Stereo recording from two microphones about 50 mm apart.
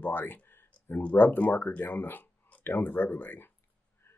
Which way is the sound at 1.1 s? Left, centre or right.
Left.